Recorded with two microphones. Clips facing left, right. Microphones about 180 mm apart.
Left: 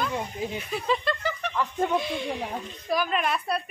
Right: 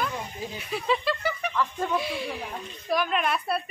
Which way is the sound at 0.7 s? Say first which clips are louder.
Right 2 dB; centre (ahead or behind).